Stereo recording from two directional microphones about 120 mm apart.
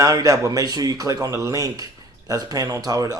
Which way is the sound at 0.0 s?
30° right (ahead or behind).